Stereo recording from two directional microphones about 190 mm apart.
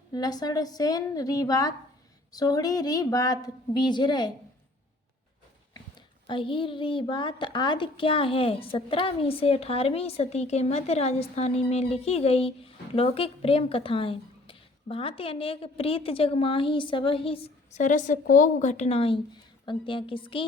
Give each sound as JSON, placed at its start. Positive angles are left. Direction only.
{"t": 0.1, "sound": "a woman's voice", "side_deg": 20}
{"t": 6.2, "sound": "a woman's voice", "side_deg": 25}